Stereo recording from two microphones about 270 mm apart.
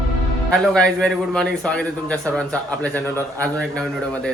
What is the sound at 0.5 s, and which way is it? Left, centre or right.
A man's voice, centre.